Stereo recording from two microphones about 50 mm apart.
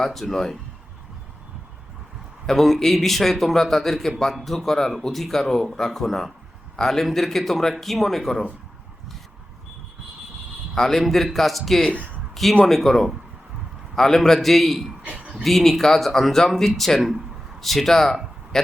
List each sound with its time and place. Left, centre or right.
0.0 s speech: centre
2.5 s speech: centre
10.8 s speech: centre
15.1 s a sound: centre
15.4 s speech: centre